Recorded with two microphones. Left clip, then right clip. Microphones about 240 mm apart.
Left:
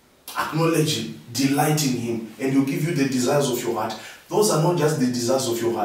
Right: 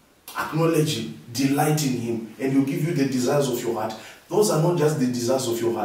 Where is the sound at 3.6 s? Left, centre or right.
Centre.